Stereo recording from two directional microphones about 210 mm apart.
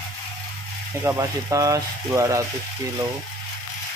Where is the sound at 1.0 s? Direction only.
15° right (ahead or behind).